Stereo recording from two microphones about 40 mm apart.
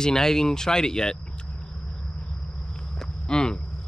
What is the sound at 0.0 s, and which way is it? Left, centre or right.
Speech, centre.